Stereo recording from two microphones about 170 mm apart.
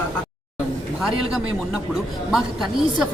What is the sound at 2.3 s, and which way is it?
Speech, centre (ahead or behind).